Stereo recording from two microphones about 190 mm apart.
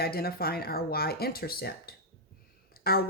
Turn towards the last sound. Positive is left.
turn(degrees=55)  # may be behind; listen again after turning